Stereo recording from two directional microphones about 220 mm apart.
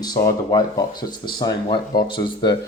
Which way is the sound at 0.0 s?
20° left (ahead or behind).